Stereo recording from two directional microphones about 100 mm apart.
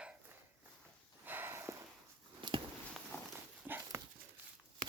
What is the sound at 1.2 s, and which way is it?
Snort, 20° right (ahead or behind).